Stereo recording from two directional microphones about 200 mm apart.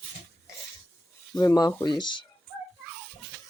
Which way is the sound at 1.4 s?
15° left (ahead or behind).